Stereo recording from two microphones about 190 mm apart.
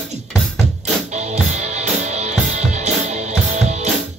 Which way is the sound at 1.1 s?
40° right (ahead or behind).